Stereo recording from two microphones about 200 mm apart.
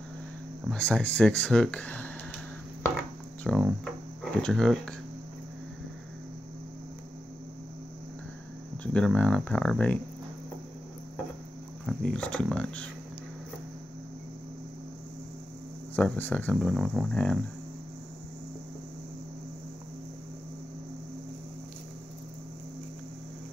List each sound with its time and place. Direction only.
0.7 s speech: 5° left (ahead or behind)
3.4 s speech: centre (ahead or behind)
8.8 s speech: 5° left (ahead or behind)
11.8 s speech: 5° left (ahead or behind)
16.0 s speech: 10° left (ahead or behind)